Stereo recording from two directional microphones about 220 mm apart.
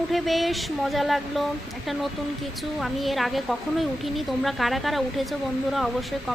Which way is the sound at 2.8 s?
Centre (ahead or behind).